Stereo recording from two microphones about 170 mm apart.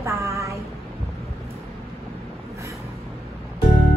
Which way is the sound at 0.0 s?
15° right (ahead or behind).